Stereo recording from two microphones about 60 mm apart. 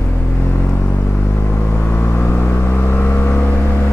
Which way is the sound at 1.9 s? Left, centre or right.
Left.